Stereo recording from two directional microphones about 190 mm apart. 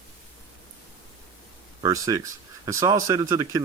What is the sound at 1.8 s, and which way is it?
Speech, 15° right (ahead or behind).